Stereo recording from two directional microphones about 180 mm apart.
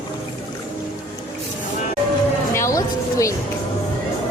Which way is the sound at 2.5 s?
15° left (ahead or behind).